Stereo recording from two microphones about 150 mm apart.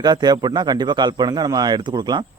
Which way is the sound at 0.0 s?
30° right (ahead or behind).